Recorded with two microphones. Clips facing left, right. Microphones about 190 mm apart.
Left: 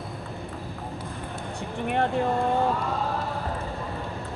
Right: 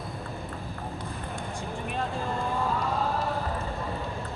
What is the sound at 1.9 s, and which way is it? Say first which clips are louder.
Speech: left 9 dB; 65° left (ahead or behind).